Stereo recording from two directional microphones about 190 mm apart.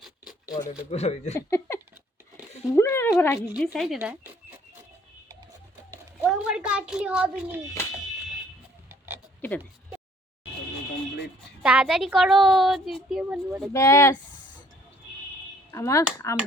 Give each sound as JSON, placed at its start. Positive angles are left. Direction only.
{"t": 0.0, "sound": "a sound", "side_deg": -5}
{"t": 0.6, "sound": "speech", "side_deg": 35}
{"t": 1.3, "sound": "speech", "side_deg": 15}
{"t": 3.5, "sound": "a woman's voice", "side_deg": 0}
{"t": 6.2, "sound": "a woman's voice", "side_deg": -5}
{"t": 8.9, "sound": "oink", "side_deg": -10}
{"t": 11.6, "sound": "a woman's voice", "side_deg": -5}
{"t": 13.7, "sound": "speech", "side_deg": 15}
{"t": 15.7, "sound": "speech", "side_deg": 15}